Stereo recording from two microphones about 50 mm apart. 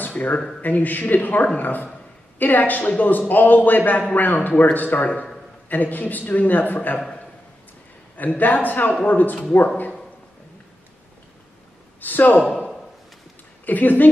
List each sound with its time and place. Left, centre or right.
0.1 s a man's voice: left
8.2 s a man's voice: left
12.0 s speech: left
13.7 s a man's voice: left